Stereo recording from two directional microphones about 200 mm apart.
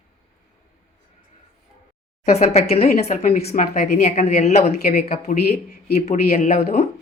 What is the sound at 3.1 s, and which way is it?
A woman's voice, 45° left (ahead or behind).